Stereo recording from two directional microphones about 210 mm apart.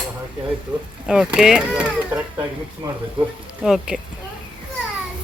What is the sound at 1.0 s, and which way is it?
Speech, 5° right (ahead or behind).